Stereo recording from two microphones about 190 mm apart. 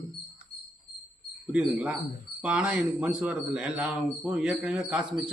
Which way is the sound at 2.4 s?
5° right (ahead or behind).